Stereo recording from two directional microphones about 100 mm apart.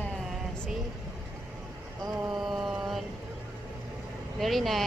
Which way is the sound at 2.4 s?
5° right (ahead or behind).